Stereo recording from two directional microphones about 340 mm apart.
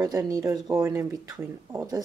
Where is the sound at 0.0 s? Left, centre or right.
Centre.